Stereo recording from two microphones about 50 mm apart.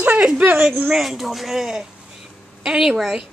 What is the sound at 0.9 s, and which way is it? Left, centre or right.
Speech, centre.